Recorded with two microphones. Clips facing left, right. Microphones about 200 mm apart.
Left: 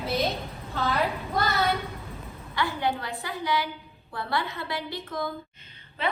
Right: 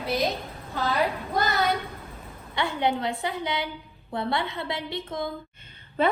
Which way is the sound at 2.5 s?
20° right (ahead or behind).